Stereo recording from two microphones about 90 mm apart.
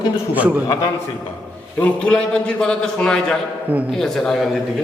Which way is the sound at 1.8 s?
10° left (ahead or behind).